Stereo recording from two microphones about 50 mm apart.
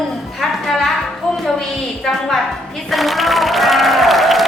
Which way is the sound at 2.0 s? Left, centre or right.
Centre.